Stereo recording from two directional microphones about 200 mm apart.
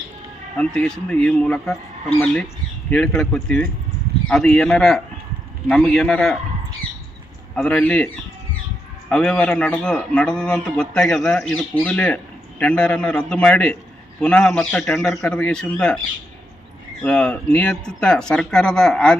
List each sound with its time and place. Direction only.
0.5 s a man's voice: 5° left (ahead or behind)
7.5 s a man's voice: 5° left (ahead or behind)
17.0 s a man's voice: 5° left (ahead or behind)